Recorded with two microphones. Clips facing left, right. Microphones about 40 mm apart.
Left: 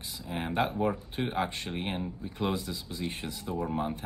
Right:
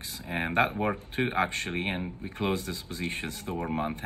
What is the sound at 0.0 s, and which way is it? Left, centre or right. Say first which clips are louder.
Speech: right 3 dB; right.